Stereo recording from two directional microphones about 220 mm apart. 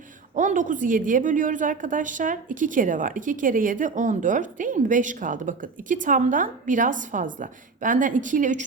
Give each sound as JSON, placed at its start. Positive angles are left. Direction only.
{"t": 0.3, "sound": "a woman's voice", "side_deg": -35}